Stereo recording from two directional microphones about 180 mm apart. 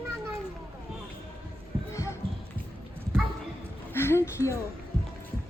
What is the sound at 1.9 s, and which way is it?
Music, 15° left (ahead or behind).